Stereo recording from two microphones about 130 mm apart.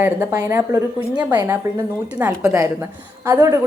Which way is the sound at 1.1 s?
15° right (ahead or behind).